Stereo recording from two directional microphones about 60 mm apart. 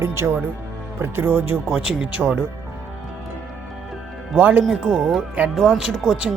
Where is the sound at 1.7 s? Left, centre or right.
Centre.